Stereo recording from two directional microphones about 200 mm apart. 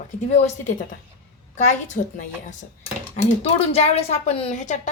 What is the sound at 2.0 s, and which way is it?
Speech, 40° left (ahead or behind).